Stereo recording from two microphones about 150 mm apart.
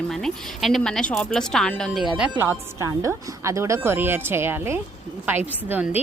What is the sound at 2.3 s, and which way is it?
A woman's voice, 15° right (ahead or behind).